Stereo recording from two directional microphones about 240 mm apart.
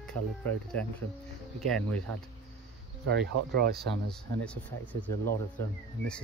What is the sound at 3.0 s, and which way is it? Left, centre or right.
Speech, right.